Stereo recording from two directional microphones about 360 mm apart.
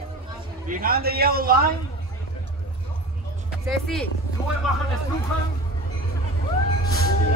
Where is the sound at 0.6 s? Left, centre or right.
Right.